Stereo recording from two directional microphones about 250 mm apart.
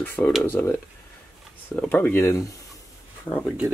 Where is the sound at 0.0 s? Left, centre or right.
Centre.